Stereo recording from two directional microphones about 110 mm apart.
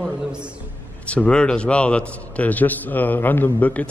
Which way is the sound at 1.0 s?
10° left (ahead or behind).